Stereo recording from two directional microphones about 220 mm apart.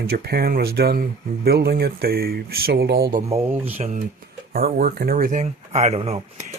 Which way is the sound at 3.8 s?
30° right (ahead or behind).